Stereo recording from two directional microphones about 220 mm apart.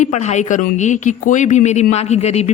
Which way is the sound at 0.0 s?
30° left (ahead or behind).